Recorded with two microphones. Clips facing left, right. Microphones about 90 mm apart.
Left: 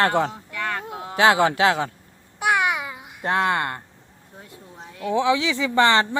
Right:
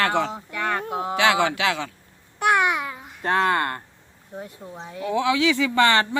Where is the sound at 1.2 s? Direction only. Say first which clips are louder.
Left 4 dB; 35° left (ahead or behind).